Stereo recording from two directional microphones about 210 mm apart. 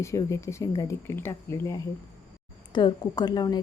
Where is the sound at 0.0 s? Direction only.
15° left (ahead or behind).